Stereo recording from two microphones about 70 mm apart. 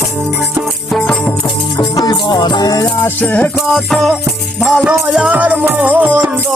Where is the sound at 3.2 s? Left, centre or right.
Left.